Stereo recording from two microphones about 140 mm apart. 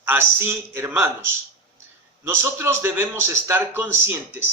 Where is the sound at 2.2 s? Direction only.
20° right (ahead or behind).